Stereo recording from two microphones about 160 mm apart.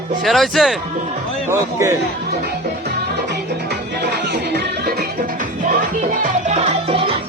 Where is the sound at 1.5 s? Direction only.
20° right (ahead or behind).